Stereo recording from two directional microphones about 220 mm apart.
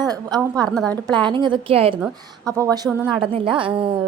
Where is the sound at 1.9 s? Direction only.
10° right (ahead or behind).